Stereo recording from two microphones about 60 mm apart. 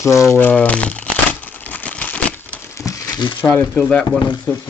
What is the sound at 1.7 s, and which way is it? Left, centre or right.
Crumpling, left.